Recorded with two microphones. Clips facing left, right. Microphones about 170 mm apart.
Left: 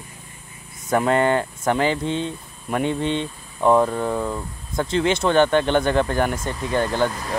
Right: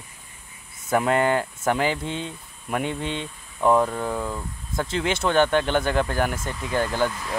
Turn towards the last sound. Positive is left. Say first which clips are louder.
# left 3 dB
turn(degrees=-5)  # may be behind; listen again after turning